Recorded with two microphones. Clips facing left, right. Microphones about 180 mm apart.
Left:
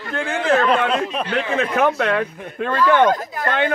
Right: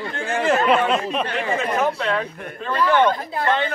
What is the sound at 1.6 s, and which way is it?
Speech, 65° left (ahead or behind).